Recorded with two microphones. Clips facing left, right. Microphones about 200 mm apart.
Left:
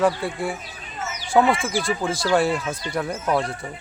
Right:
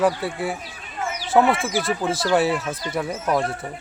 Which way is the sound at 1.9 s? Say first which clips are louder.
Even; 5° right (ahead or behind).